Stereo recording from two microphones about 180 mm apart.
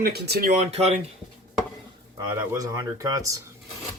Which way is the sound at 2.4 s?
15° right (ahead or behind).